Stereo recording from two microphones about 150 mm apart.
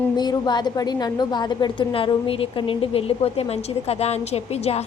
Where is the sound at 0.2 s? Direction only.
30° left (ahead or behind).